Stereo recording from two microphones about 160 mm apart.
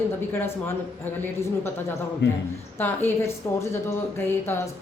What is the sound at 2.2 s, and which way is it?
Speech, 90° left.